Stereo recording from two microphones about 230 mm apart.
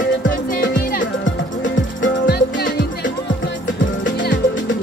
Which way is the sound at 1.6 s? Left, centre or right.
Left.